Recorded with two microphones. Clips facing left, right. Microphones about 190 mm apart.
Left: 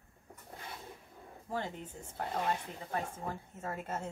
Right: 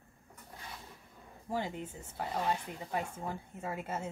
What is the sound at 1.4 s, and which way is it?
A woman's voice, 10° right (ahead or behind).